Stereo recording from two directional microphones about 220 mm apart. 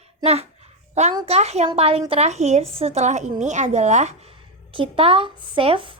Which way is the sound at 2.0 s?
30° right (ahead or behind).